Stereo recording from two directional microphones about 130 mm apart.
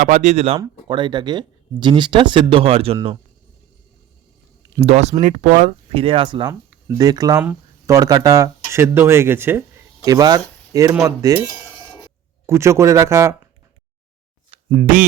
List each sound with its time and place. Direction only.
0.0 s speech: 60° right (ahead or behind)
0.9 s speech: 40° right (ahead or behind)
4.8 s speech: 55° right (ahead or behind)
5.2 s speech: 70° right (ahead or behind)
5.9 s speech: 45° right (ahead or behind)
6.5 s speech: 25° right (ahead or behind)
12.5 s speech: 20° right (ahead or behind)
14.8 s speech: 90° right